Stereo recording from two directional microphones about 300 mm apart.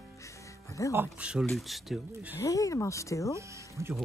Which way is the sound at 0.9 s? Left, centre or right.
Centre.